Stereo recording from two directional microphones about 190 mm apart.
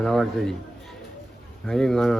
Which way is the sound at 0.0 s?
Centre (ahead or behind).